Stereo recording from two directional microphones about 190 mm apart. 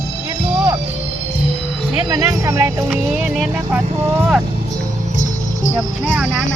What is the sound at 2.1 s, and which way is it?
Music, 20° right (ahead or behind).